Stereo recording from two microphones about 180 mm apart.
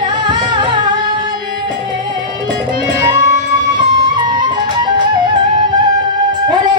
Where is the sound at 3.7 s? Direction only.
25° right (ahead or behind).